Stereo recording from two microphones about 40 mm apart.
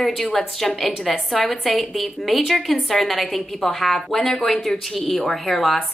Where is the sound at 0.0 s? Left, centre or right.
Centre.